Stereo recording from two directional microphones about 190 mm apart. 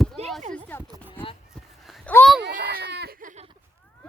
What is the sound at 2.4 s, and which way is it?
Baby cry, 50° right (ahead or behind).